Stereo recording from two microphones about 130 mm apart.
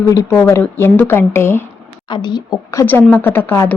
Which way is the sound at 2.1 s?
35° left (ahead or behind).